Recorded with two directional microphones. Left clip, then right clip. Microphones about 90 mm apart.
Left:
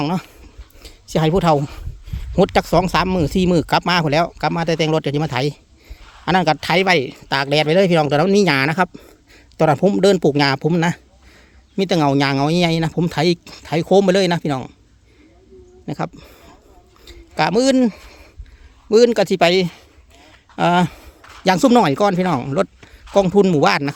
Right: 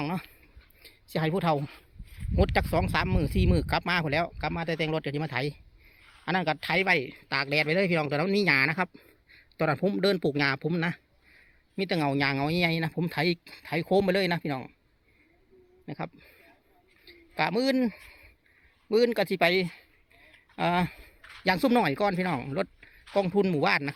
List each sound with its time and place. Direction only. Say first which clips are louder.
0.0 s speech: left 11 dB; 20° left (ahead or behind)
0.8 s a sound: left 11 dB; 30° left (ahead or behind)
1.5 s speech: left 12 dB; centre (ahead or behind)
2.3 s speech: left 11 dB; 35° left (ahead or behind)
6.2 s speech: left 12 dB; 45° left (ahead or behind); by 14.7 s 20° left (ahead or behind)
16.1 s a sound: left 12 dB; 40° left (ahead or behind)
17.1 s speech: left 10 dB; 25° left (ahead or behind)
21.2 s a sound: left 7 dB; 15° left (ahead or behind)
21.4 s speech: left 11 dB; 30° left (ahead or behind)